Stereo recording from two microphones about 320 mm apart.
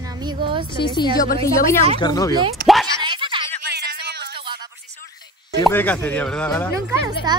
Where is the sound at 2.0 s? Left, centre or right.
Centre.